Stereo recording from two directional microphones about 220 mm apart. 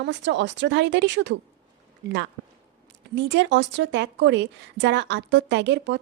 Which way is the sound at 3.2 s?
55° right (ahead or behind).